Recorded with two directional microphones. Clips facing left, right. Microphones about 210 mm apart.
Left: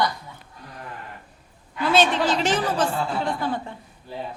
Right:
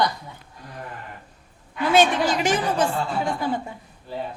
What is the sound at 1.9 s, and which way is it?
Speech, 10° right (ahead or behind).